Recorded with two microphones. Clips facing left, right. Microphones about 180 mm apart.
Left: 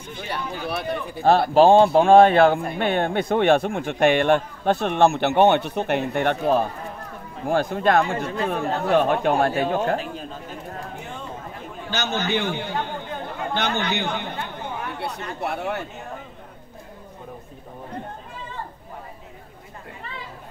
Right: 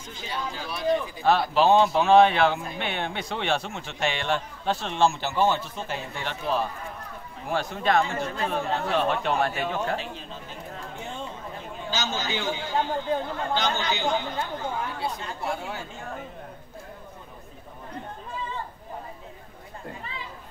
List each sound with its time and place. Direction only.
0.1 s speech: 60° left (ahead or behind)
9.5 s speech: 40° left (ahead or behind)
11.9 s speech: 60° left (ahead or behind)